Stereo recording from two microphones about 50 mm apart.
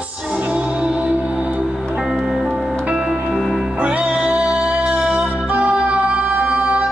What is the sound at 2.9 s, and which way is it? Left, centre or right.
Music, right.